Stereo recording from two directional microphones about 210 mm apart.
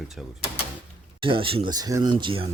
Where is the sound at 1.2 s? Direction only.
25° right (ahead or behind).